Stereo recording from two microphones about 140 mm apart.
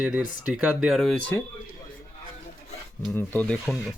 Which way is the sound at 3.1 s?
15° left (ahead or behind).